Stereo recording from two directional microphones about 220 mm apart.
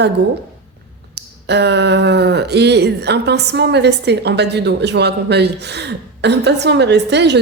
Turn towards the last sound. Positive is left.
turn(degrees=-50)  # may be behind; listen again after turning